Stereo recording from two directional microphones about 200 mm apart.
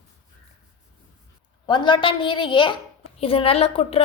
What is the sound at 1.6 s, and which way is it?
A woman's voice, 25° left (ahead or behind).